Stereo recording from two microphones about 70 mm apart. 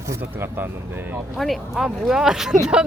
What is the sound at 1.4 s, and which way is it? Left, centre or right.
Speech, centre.